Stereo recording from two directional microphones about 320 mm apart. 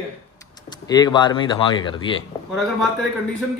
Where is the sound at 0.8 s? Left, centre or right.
Centre.